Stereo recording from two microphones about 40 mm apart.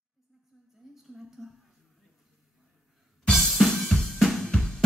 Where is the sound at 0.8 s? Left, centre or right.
Centre.